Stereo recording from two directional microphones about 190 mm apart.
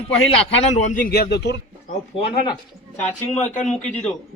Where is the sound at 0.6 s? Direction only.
40° left (ahead or behind); by 1.6 s 60° left (ahead or behind).